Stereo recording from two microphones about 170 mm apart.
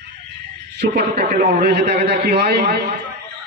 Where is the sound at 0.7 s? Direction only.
75° right (ahead or behind).